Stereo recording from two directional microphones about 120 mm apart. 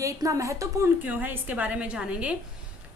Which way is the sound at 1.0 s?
15° right (ahead or behind).